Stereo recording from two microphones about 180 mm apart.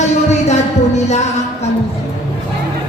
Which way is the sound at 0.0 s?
40° left (ahead or behind).